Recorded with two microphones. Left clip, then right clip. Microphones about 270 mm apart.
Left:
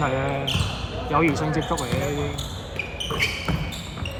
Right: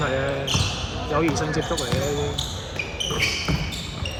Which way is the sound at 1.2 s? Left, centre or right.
Left.